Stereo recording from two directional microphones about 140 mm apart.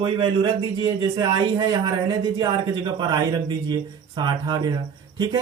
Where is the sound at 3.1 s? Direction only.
30° right (ahead or behind).